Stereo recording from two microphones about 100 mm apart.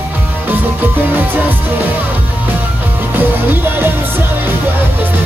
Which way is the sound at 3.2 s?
20° right (ahead or behind).